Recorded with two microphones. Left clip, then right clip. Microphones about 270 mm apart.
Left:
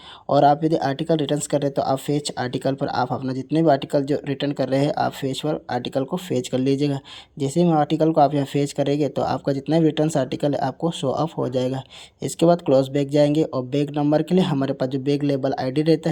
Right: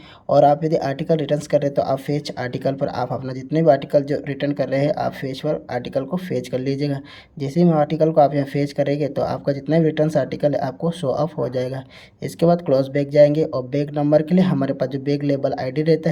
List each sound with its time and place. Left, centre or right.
0.3 s speech: centre